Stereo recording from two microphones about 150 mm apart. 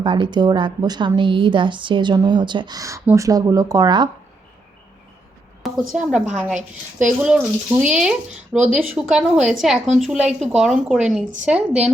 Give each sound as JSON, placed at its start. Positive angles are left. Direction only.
{"t": 0.0, "sound": "a woman's voice", "side_deg": -30}
{"t": 5.6, "sound": "speech", "side_deg": 0}